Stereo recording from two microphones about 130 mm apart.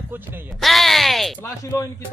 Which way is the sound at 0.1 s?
15° right (ahead or behind).